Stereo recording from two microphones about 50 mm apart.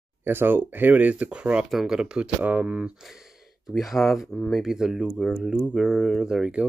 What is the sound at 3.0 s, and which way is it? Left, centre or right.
Speech, centre.